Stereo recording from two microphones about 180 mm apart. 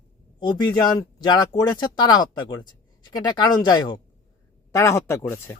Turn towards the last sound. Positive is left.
turn(degrees=15)  # may be behind; listen again after turning